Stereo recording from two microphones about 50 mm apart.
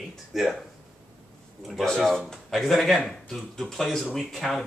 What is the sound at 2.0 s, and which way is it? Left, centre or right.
Speech, centre.